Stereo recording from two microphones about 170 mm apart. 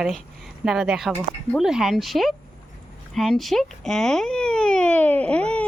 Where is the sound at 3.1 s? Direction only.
Centre (ahead or behind).